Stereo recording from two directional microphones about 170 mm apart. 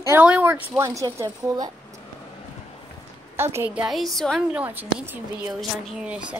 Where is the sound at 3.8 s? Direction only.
Centre (ahead or behind).